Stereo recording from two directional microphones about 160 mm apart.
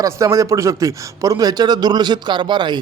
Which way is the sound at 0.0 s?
20° right (ahead or behind).